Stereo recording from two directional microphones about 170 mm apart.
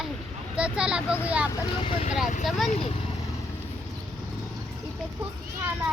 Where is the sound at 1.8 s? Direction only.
30° left (ahead or behind).